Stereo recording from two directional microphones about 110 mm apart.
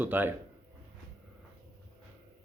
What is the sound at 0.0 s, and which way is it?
Speech, 15° right (ahead or behind).